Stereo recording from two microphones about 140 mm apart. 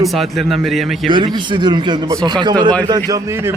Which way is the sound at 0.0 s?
Centre (ahead or behind).